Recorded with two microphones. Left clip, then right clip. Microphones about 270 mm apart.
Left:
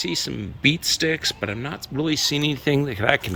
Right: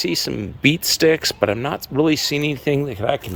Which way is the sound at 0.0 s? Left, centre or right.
Centre.